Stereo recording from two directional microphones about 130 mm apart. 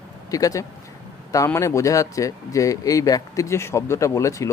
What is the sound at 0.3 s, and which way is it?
Speech, 25° left (ahead or behind).